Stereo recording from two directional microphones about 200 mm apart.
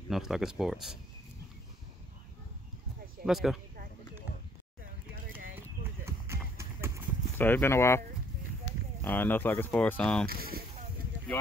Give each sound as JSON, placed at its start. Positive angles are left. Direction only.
{"t": 0.1, "sound": "speech", "side_deg": 0}
{"t": 3.3, "sound": "speech", "side_deg": 0}
{"t": 6.0, "sound": "clip-clop", "side_deg": -10}
{"t": 7.3, "sound": "speech", "side_deg": 10}
{"t": 9.0, "sound": "speech", "side_deg": 10}
{"t": 10.2, "sound": "speech", "side_deg": -50}